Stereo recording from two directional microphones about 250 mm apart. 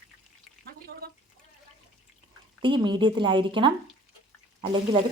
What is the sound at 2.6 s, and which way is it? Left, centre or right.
Speech, centre.